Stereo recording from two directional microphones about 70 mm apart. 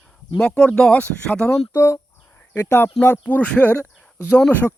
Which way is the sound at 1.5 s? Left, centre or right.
Left.